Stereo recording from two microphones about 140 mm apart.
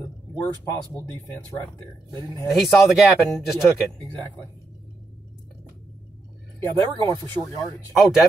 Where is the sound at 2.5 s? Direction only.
5° right (ahead or behind).